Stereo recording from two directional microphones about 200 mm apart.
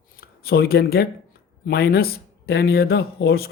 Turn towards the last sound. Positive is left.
turn(degrees=50)  # may be behind; listen again after turning